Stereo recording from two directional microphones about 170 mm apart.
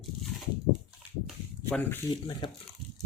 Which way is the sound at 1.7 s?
10° left (ahead or behind).